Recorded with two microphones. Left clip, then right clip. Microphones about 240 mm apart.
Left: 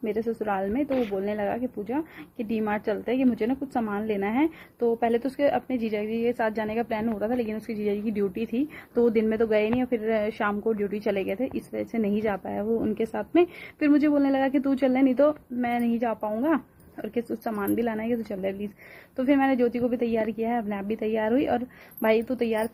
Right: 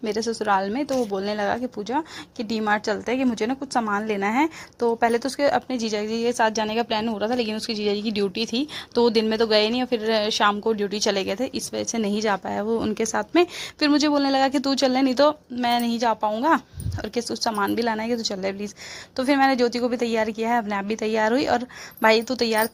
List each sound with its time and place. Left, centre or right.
0.0 s a woman's voice: centre
8.5 s a woman's voice: centre